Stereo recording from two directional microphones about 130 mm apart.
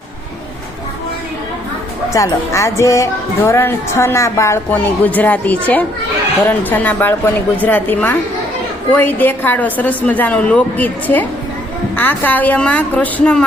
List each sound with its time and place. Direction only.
2.1 s a woman's voice: 25° left (ahead or behind)